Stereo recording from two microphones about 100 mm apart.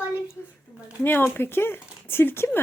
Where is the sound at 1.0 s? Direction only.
20° left (ahead or behind).